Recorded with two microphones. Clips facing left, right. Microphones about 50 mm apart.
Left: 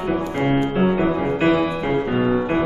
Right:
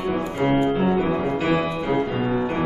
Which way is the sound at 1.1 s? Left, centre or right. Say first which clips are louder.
Left 3 dB; centre.